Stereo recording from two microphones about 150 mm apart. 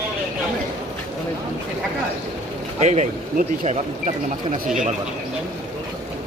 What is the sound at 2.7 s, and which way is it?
A man's voice, 50° right (ahead or behind).